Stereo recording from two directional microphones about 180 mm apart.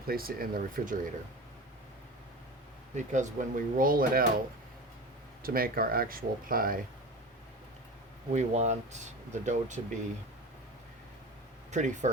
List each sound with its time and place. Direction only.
0.1 s speech: 55° right (ahead or behind)
2.9 s speech: 40° right (ahead or behind)
5.4 s speech: 55° right (ahead or behind)
8.3 s speech: 40° right (ahead or behind)
11.7 s speech: 40° right (ahead or behind)